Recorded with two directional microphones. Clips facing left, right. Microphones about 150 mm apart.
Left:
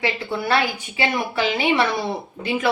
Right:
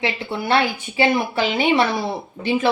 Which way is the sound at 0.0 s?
25° right (ahead or behind).